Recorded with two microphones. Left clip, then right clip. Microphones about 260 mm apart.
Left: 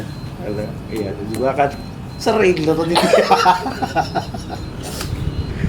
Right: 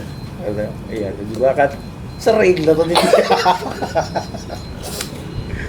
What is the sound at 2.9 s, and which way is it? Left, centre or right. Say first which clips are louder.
Speech: left 1 dB; right.